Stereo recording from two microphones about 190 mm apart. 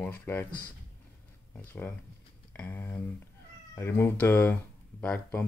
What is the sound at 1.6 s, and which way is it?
Speech, 10° left (ahead or behind).